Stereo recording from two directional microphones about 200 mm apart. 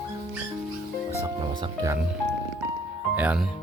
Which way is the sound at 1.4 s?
15° right (ahead or behind).